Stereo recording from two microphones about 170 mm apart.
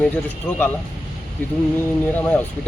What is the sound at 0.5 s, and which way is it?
Speech, 10° left (ahead or behind).